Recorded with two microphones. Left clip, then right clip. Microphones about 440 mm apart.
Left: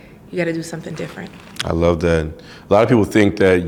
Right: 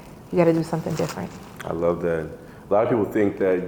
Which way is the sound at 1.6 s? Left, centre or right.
Left.